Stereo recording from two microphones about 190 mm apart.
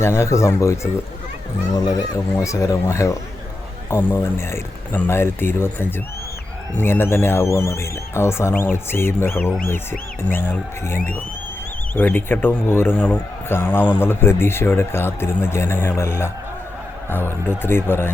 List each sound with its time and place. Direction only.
0.0 s speech: 15° left (ahead or behind)